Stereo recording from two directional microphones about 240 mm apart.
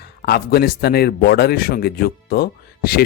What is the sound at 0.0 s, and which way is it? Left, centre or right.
A man's voice, left.